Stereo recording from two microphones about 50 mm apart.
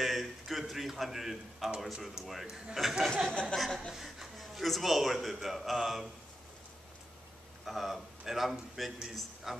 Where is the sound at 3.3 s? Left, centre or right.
Left.